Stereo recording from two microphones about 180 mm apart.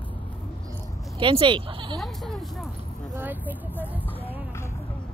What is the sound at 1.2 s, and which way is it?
Speech, 25° right (ahead or behind).